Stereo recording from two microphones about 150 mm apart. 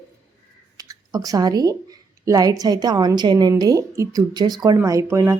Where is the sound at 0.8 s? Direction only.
25° right (ahead or behind).